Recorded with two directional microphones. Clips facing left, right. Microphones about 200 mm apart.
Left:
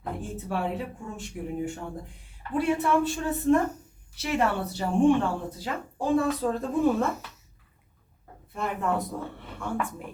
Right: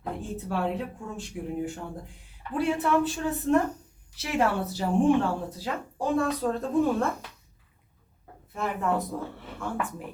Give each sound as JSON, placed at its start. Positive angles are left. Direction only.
{"t": 0.0, "sound": "speech", "side_deg": 0}
{"t": 8.5, "sound": "speech", "side_deg": 0}